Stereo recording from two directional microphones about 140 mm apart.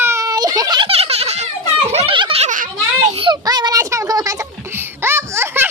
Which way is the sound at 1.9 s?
50° right (ahead or behind).